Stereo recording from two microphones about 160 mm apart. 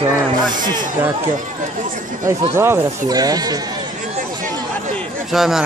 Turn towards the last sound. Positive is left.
turn(degrees=0)  # may be behind; listen again after turning